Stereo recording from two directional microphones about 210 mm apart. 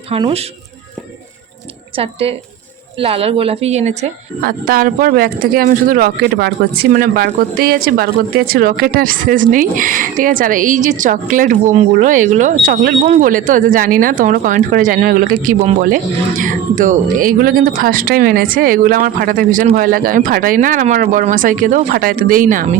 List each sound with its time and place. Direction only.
0.1 s a woman's voice: 25° right (ahead or behind)
2.0 s a woman's voice: 30° right (ahead or behind)
4.4 s a woman's voice: 45° right (ahead or behind)